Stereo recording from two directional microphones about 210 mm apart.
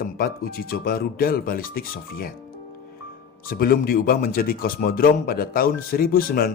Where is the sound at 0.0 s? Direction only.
45° left (ahead or behind).